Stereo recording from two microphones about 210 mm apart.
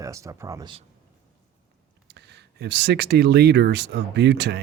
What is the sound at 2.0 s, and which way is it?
Speech, 55° right (ahead or behind).